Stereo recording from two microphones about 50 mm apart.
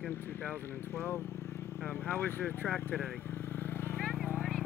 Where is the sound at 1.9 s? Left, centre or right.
Left.